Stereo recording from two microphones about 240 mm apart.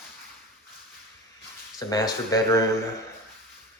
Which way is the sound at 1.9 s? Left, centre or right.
Centre.